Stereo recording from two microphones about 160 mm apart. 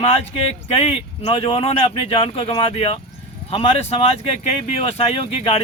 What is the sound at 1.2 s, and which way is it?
Speech, 35° left (ahead or behind).